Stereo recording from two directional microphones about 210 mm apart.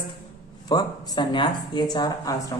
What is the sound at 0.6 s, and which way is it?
A woman's voice, 20° left (ahead or behind).